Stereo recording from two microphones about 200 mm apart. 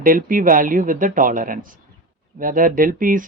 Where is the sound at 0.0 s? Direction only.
45° right (ahead or behind).